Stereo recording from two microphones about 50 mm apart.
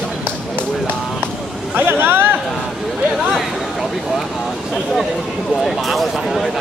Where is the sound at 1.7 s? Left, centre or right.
Right.